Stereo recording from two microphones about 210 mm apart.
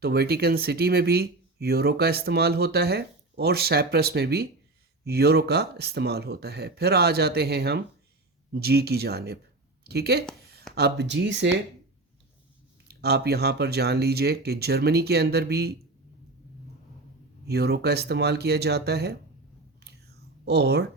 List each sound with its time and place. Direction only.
0.0 s speech: 50° right (ahead or behind)
12.9 s speech: 50° right (ahead or behind)
17.4 s speech: 50° right (ahead or behind)
19.8 s whispering: 50° right (ahead or behind)